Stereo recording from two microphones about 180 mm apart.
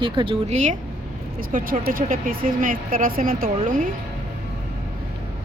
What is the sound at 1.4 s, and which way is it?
Speech, 50° right (ahead or behind).